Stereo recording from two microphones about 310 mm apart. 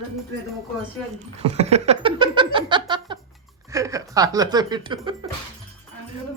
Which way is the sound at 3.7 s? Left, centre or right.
Centre.